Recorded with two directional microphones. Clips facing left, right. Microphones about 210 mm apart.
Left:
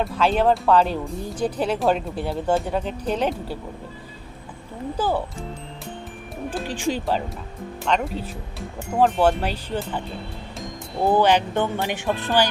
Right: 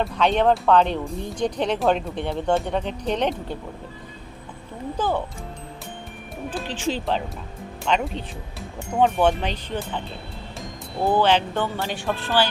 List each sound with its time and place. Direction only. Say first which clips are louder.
0.0 s speech: even; 5° left (ahead or behind)
4.9 s speech: left 1 dB; 10° left (ahead or behind)
6.5 s speech: left 1 dB; 10° left (ahead or behind)
7.9 s speech: even; centre (ahead or behind)
11.1 s speech: left 1 dB; 10° left (ahead or behind)